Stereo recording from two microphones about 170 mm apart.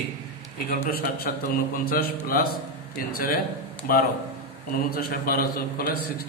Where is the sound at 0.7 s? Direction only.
65° left (ahead or behind).